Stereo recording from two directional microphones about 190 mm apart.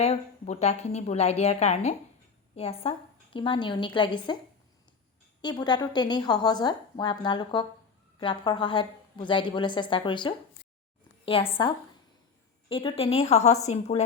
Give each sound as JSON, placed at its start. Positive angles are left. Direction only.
{"t": 0.0, "sound": "a woman's voice", "side_deg": 35}
{"t": 5.4, "sound": "a woman's voice", "side_deg": 20}